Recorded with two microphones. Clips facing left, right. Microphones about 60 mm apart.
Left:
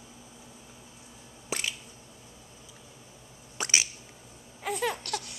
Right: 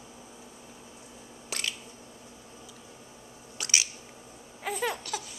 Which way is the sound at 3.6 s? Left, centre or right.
Left.